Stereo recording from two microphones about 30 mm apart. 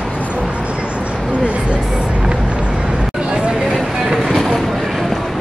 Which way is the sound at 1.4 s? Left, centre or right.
Right.